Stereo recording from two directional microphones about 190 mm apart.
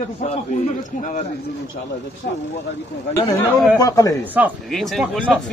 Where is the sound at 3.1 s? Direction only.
20° left (ahead or behind).